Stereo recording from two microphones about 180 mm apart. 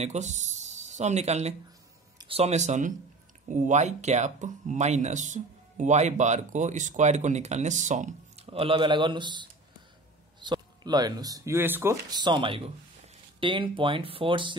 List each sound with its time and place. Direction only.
0.0 s speech: 40° right (ahead or behind)